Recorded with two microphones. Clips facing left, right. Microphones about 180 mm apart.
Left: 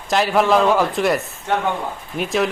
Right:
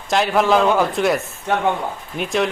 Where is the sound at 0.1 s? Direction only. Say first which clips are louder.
Even; centre (ahead or behind).